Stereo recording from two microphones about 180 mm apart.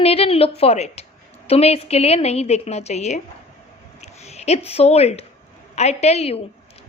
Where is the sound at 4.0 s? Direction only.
35° left (ahead or behind).